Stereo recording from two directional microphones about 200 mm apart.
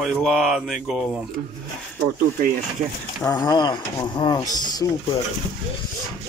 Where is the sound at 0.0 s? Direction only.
Centre (ahead or behind).